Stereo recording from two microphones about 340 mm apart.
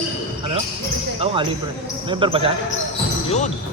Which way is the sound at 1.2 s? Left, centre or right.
Centre.